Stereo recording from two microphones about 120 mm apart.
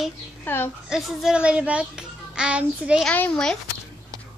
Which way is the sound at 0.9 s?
5° right (ahead or behind).